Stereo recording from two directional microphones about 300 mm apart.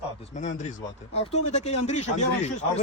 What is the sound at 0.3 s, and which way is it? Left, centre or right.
A man's voice, left.